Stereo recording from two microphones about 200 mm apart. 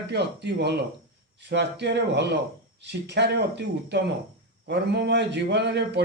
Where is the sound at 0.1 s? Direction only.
55° right (ahead or behind).